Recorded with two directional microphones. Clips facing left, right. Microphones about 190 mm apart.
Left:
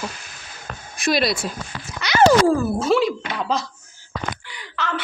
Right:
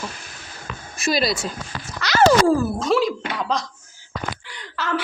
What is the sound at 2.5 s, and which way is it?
Speech, centre (ahead or behind).